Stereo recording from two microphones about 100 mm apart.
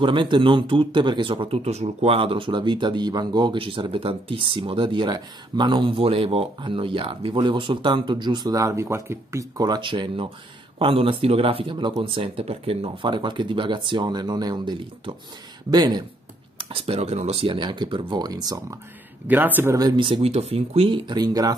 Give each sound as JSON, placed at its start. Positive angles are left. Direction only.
{"t": 0.0, "sound": "speech", "side_deg": -55}
{"t": 3.5, "sound": "speech", "side_deg": -60}
{"t": 9.8, "sound": "speech", "side_deg": -55}
{"t": 13.0, "sound": "speech", "side_deg": -55}
{"t": 16.5, "sound": "speech", "side_deg": -70}
{"t": 17.5, "sound": "speech", "side_deg": -50}
{"t": 19.2, "sound": "speech", "side_deg": -20}
{"t": 19.7, "sound": "speech", "side_deg": -40}
{"t": 20.0, "sound": "speech", "side_deg": -65}
{"t": 21.0, "sound": "speech", "side_deg": -45}